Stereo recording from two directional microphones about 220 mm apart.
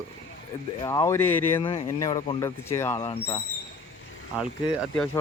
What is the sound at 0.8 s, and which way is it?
Speech, 15° left (ahead or behind).